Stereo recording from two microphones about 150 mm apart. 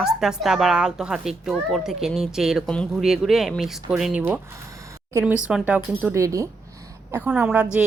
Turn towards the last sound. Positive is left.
turn(degrees=-10)  # may be behind; listen again after turning